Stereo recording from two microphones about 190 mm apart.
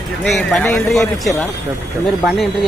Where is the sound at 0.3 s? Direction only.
Centre (ahead or behind).